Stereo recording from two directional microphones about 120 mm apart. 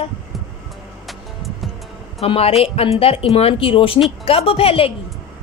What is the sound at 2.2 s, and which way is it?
Speech, 55° left (ahead or behind).